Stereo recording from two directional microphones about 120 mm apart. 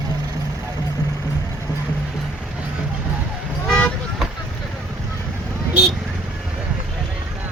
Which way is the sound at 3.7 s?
10° left (ahead or behind).